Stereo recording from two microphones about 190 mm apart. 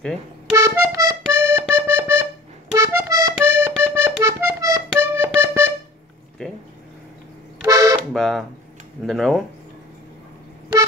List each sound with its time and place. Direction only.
0.6 s music: 15° right (ahead or behind)
7.6 s toot: 20° right (ahead or behind)
8.1 s a sound: centre (ahead or behind)